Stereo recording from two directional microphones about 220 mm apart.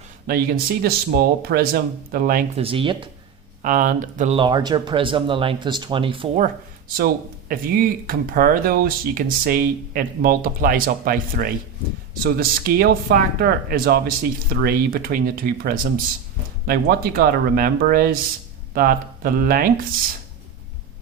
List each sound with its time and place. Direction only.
0.3 s speech: 40° right (ahead or behind)
2.6 s speech: 25° right (ahead or behind)
3.6 s speech: 35° right (ahead or behind)
4.4 s speech: 20° right (ahead or behind)
6.4 s speech: 40° right (ahead or behind)